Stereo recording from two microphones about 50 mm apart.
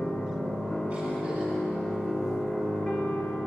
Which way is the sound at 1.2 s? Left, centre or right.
Centre.